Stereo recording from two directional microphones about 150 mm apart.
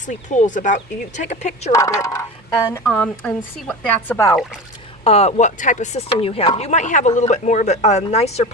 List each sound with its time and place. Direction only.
0.1 s speech: 55° left (ahead or behind)
1.7 s speech: 20° left (ahead or behind)
5.0 s speech: 45° left (ahead or behind)